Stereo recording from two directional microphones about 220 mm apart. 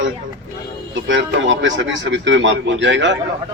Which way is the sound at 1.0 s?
60° right (ahead or behind).